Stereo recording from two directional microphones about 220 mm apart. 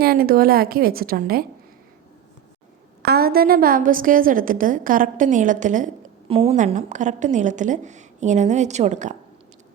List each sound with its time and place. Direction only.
0.0 s a woman's voice: 45° right (ahead or behind)
3.0 s a woman's voice: 45° right (ahead or behind)